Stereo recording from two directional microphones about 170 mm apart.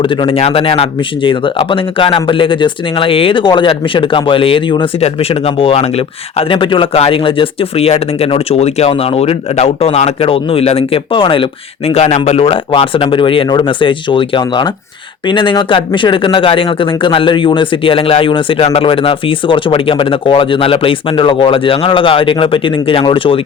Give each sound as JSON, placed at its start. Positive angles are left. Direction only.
{"t": 0.0, "sound": "speech", "side_deg": 30}